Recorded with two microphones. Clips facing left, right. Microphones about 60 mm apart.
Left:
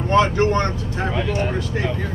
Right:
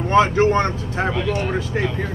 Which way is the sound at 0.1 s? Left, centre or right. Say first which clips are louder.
Right 2 dB; centre.